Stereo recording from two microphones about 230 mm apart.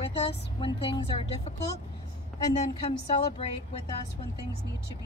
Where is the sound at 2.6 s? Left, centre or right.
Left.